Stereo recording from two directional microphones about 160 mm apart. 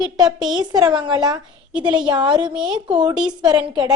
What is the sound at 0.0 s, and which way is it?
A woman's voice, 25° right (ahead or behind).